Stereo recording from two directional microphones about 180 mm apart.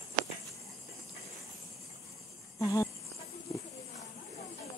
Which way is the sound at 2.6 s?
15° left (ahead or behind).